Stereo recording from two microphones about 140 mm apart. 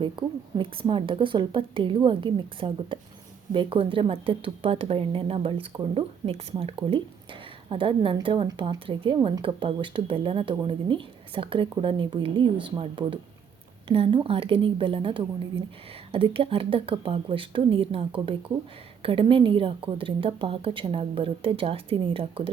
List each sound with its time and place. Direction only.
0.0 s speech: 35° right (ahead or behind)